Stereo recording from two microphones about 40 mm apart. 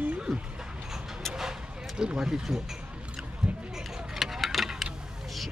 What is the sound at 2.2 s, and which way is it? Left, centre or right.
Speech, centre.